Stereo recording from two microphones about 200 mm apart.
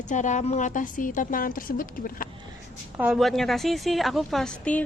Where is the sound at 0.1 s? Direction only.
40° left (ahead or behind).